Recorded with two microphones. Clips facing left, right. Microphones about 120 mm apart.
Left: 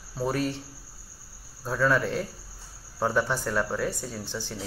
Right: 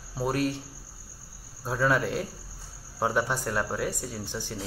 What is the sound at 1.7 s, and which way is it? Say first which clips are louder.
Speech: left 1 dB; 15° right (ahead or behind).